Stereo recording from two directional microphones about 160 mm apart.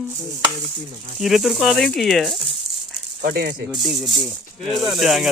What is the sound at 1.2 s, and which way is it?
Speech, centre (ahead or behind).